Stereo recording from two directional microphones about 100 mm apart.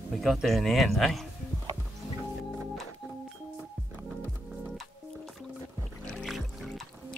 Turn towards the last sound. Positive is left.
turn(degrees=5)  # may be behind; listen again after turning